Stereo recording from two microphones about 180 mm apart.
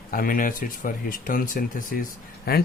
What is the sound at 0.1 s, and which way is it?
Speech, 50° left (ahead or behind).